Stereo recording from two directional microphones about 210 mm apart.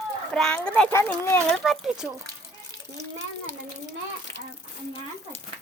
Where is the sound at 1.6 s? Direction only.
Centre (ahead or behind).